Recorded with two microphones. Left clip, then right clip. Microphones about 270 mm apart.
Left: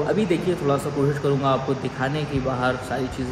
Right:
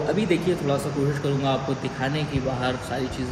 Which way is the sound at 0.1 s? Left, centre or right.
Centre.